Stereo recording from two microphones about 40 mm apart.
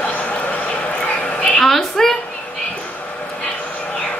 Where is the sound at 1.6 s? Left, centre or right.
Centre.